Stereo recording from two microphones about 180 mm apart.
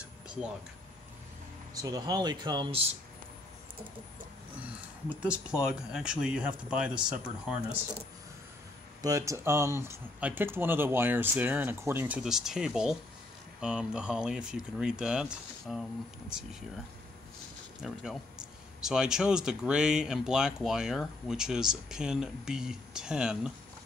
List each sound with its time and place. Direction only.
0.0 s a sound: 5° right (ahead or behind)
1.7 s speech: 20° right (ahead or behind)
4.6 s speech: 10° right (ahead or behind)
9.0 s speech: 15° right (ahead or behind)
17.8 s speech: centre (ahead or behind)